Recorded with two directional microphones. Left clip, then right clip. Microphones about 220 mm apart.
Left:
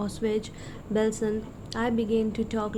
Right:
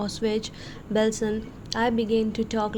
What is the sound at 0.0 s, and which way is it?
A woman's voice, 25° right (ahead or behind).